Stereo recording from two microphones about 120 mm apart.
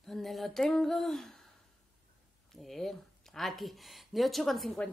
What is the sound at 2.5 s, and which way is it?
A woman's voice, centre (ahead or behind).